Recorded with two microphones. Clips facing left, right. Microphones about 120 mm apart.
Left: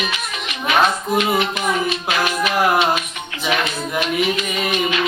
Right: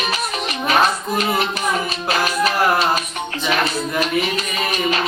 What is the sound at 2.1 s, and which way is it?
Music, 35° right (ahead or behind).